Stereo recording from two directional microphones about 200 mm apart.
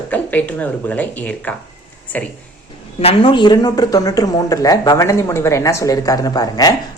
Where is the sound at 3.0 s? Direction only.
25° left (ahead or behind).